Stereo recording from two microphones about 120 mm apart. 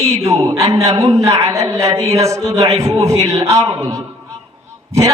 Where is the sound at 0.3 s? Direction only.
25° right (ahead or behind).